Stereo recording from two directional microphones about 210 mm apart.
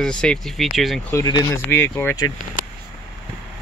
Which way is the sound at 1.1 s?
20° left (ahead or behind).